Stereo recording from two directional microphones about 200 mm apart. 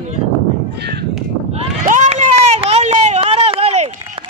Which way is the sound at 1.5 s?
35° right (ahead or behind).